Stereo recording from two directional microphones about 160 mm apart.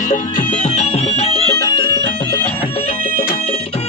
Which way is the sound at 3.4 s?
40° left (ahead or behind).